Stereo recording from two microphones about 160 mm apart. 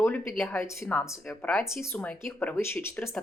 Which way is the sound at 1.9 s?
10° left (ahead or behind).